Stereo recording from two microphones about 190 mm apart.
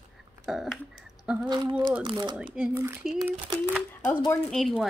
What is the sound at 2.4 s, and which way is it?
Speech, 10° right (ahead or behind).